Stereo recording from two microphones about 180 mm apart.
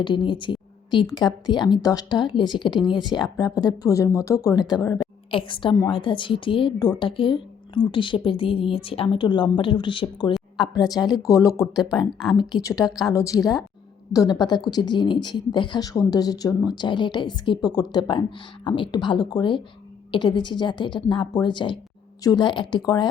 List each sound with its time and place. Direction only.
0.0 s a woman's voice: 25° left (ahead or behind)
11.9 s speech: centre (ahead or behind)
13.1 s speech: 20° left (ahead or behind)